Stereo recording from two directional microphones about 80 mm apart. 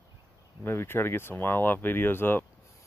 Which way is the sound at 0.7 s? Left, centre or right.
Left.